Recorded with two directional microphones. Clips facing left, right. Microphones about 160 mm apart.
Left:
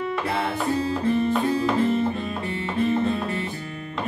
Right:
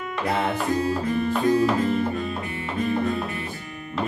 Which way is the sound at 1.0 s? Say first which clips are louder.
Left 3 dB; 25° left (ahead or behind).